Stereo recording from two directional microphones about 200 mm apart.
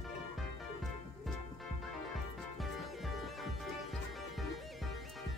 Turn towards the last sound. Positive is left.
turn(degrees=0)  # may be behind; listen again after turning